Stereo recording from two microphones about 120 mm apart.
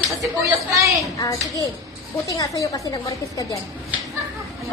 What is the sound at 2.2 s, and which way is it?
Speech, 30° left (ahead or behind).